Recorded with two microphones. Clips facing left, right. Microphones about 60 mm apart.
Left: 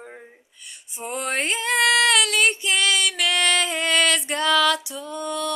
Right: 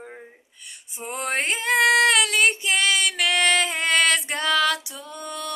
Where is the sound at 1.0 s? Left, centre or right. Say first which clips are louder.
Left 1 dB; right.